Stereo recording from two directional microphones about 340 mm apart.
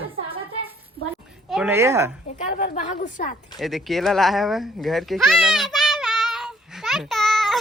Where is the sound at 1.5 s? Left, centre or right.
Centre.